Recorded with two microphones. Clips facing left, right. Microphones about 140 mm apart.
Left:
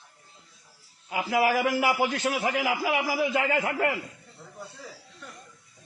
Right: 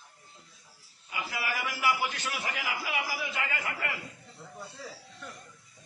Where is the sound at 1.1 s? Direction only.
90° left.